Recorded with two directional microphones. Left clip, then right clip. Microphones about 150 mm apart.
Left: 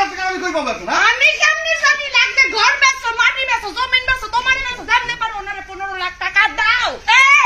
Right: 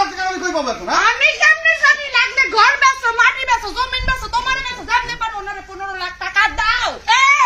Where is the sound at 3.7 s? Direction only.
15° left (ahead or behind).